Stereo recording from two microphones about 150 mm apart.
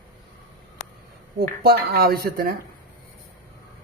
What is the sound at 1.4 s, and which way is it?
Speech, 90° right.